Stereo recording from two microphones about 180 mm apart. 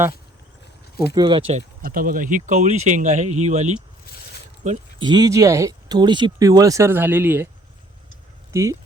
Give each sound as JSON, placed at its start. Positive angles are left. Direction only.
{"t": 1.1, "sound": "speech", "side_deg": -25}
{"t": 1.8, "sound": "speech", "side_deg": -50}
{"t": 5.0, "sound": "speech", "side_deg": -20}
{"t": 8.5, "sound": "speech", "side_deg": -15}